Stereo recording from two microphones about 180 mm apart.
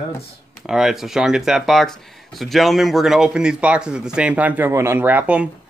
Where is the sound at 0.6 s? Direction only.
Centre (ahead or behind).